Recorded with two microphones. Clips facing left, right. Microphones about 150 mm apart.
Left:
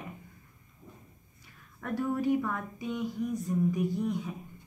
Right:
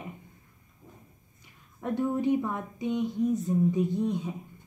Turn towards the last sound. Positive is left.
turn(degrees=-20)  # may be behind; listen again after turning